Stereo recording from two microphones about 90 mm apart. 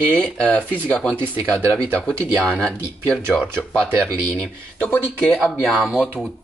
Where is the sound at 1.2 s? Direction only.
25° right (ahead or behind).